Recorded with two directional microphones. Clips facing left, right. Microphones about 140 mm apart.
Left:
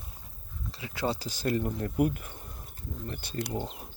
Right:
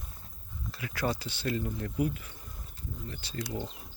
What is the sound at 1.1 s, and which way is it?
Speech, 40° left (ahead or behind).